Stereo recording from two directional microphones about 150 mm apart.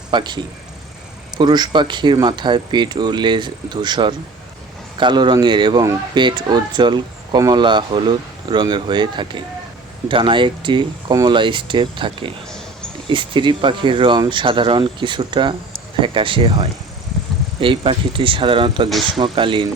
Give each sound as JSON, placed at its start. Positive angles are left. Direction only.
{"t": 0.1, "sound": "speech", "side_deg": -30}
{"t": 1.4, "sound": "speech", "side_deg": -30}
{"t": 18.9, "sound": "speech", "side_deg": 0}
{"t": 19.1, "sound": "speech", "side_deg": -35}